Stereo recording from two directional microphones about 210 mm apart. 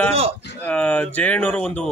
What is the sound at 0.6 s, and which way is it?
Speech, 5° left (ahead or behind).